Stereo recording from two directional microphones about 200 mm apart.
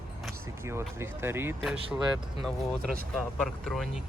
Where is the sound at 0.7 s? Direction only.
10° right (ahead or behind).